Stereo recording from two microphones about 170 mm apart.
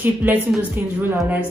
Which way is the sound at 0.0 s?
10° right (ahead or behind).